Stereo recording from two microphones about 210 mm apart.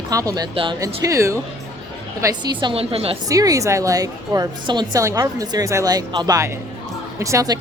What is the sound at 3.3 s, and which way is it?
A woman's voice, 15° right (ahead or behind).